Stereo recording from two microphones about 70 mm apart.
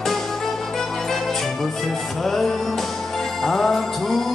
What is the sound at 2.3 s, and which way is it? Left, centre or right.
Music, centre.